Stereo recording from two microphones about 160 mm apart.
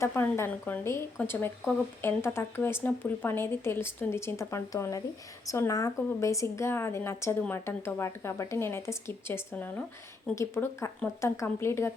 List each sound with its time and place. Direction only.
0.0 s speech: 15° left (ahead or behind)